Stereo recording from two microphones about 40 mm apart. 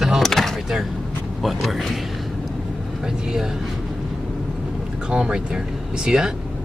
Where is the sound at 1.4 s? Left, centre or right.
Centre.